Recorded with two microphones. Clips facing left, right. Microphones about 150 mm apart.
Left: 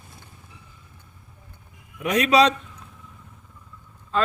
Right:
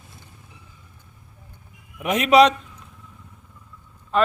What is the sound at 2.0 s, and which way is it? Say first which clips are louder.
Speech: right 3 dB; 25° right (ahead or behind).